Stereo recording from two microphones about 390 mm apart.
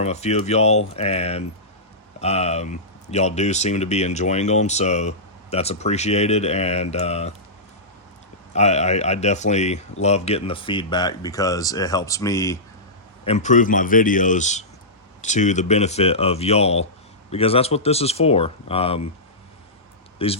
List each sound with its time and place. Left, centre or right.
0.0 s speech: centre
8.5 s speech: centre
20.1 s speech: centre